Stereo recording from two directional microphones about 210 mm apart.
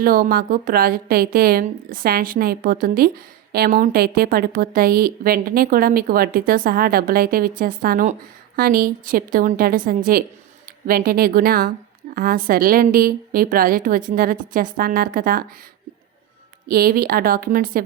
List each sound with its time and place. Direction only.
0.0 s a woman's voice: 45° right (ahead or behind)
16.6 s a woman's voice: 45° right (ahead or behind)